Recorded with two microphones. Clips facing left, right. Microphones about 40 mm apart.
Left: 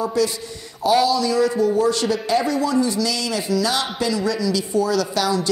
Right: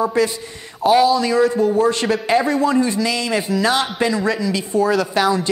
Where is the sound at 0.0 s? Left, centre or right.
Right.